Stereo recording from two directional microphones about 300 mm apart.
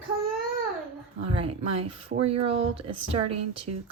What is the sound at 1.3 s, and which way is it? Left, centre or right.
Speech, centre.